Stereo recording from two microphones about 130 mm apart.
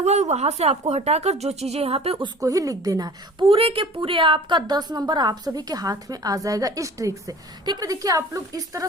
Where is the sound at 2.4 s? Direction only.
25° right (ahead or behind).